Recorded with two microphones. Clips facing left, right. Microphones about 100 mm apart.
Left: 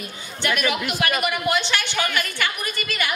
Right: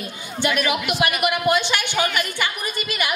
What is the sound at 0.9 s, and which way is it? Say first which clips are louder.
A woman's voice: right 2 dB; 15° right (ahead or behind).